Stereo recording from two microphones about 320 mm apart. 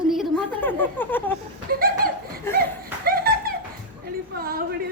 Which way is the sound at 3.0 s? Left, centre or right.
Right.